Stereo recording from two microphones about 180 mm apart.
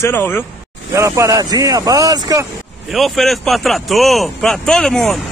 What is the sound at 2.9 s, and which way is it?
Speech, centre (ahead or behind).